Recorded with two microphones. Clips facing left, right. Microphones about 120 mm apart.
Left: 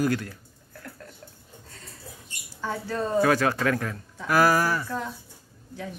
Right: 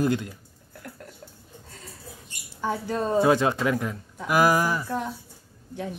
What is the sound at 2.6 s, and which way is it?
Speech, 20° right (ahead or behind).